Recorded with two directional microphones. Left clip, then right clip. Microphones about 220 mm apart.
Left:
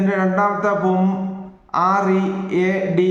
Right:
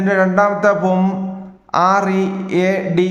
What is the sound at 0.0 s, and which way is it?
Speech, 50° right (ahead or behind).